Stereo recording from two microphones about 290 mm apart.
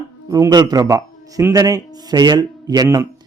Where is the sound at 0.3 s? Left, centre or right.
Centre.